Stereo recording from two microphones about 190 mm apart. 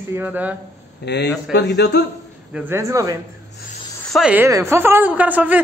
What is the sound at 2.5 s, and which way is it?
Speech, 15° right (ahead or behind).